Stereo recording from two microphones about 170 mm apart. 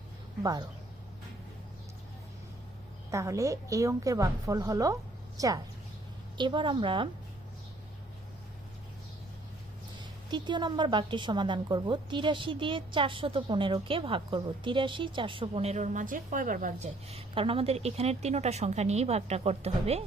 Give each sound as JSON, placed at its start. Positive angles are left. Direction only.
{"t": 3.1, "sound": "a woman's voice", "side_deg": -20}
{"t": 10.0, "sound": "a woman's voice", "side_deg": -25}